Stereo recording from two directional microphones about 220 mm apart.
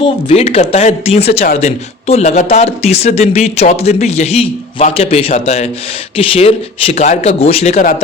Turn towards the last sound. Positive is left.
turn(degrees=30)  # may be behind; listen again after turning